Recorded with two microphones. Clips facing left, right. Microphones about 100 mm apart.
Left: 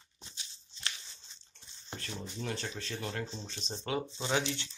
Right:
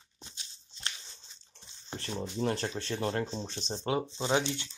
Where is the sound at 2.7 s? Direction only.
30° right (ahead or behind).